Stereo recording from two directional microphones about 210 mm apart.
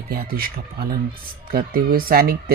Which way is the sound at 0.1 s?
45° right (ahead or behind).